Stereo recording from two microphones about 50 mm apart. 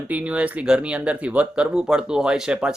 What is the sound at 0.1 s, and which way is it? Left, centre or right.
Speech, right.